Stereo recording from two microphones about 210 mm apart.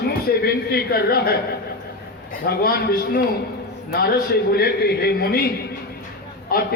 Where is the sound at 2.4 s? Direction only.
45° left (ahead or behind).